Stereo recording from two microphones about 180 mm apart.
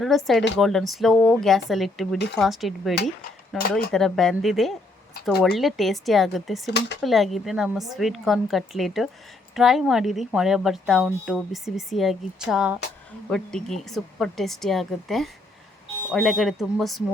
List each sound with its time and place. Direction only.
0.0 s a woman's voice: centre (ahead or behind)
6.7 s speech: 75° left (ahead or behind)
7.0 s a woman's voice: centre (ahead or behind)